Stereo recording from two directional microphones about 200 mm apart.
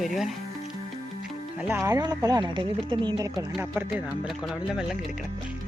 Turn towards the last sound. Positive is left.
turn(degrees=0)  # may be behind; listen again after turning